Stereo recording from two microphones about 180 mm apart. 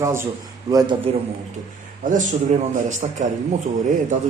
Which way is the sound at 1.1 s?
30° right (ahead or behind).